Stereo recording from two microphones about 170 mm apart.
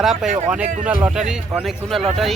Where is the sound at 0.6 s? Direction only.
45° right (ahead or behind).